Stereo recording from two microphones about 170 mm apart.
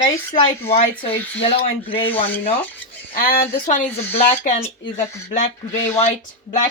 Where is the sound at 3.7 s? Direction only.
40° left (ahead or behind).